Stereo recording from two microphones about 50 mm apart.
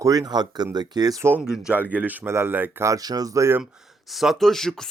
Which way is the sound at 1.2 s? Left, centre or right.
Right.